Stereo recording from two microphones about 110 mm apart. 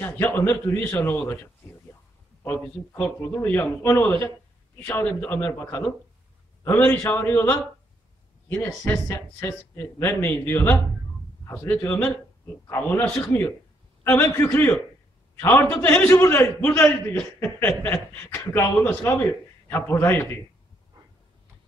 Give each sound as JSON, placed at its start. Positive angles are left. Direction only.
{"t": 0.0, "sound": "a man's voice", "side_deg": 20}
{"t": 2.4, "sound": "a man's voice", "side_deg": 20}